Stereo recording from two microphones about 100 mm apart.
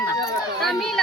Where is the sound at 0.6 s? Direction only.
Centre (ahead or behind).